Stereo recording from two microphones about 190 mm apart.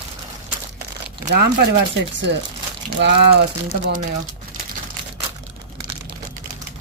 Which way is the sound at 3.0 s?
60° right (ahead or behind).